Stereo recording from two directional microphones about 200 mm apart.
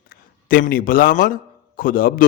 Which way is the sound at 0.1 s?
45° left (ahead or behind).